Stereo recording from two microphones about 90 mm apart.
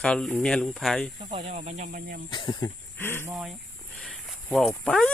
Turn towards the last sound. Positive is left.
turn(degrees=10)  # may be behind; listen again after turning